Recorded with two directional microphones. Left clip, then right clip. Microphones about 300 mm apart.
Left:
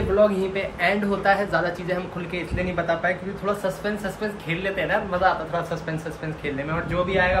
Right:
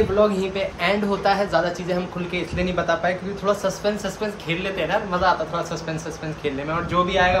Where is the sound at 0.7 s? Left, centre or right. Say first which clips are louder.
Even; centre.